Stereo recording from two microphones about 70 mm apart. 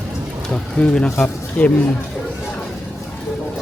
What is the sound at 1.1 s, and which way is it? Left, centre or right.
Speech, left.